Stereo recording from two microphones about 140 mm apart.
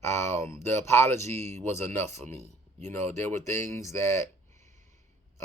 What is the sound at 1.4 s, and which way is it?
Speech, 55° right (ahead or behind).